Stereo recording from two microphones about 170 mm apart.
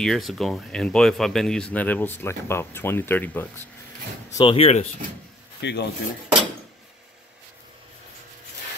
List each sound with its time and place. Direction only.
0.0 s speech: centre (ahead or behind)
4.4 s speech: 30° left (ahead or behind)
5.6 s speech: 90° left